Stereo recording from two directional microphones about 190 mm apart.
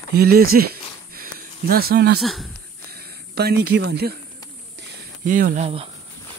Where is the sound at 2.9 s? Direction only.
55° right (ahead or behind).